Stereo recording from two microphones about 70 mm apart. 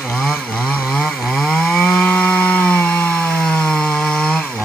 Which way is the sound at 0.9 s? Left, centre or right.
Centre.